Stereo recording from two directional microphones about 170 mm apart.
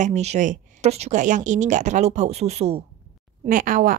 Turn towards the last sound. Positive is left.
turn(degrees=-55)  # may be behind; listen again after turning